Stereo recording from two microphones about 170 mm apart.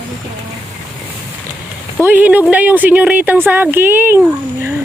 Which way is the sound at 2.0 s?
10° right (ahead or behind).